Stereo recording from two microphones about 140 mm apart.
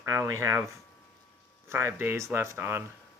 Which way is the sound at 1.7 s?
15° right (ahead or behind).